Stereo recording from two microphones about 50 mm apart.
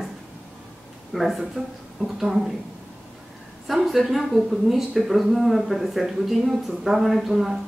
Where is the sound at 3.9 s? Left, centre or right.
Centre.